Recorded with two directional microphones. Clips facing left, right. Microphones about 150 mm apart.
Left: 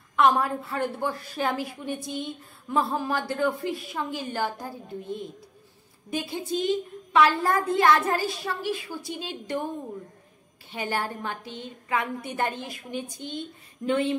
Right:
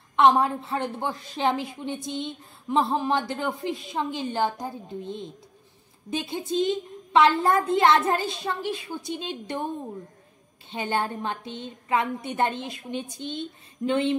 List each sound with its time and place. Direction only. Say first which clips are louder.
0.1 s a woman's voice: right 2 dB; 25° right (ahead or behind)
10.7 s a woman's voice: right 2 dB; 25° right (ahead or behind)